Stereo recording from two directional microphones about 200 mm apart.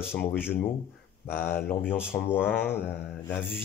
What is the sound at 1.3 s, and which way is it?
Speech, 10° left (ahead or behind).